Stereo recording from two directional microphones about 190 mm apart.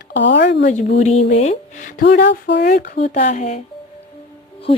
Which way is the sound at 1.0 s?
35° left (ahead or behind).